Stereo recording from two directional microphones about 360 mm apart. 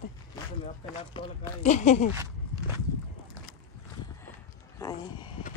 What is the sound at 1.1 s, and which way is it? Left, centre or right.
Speech, centre.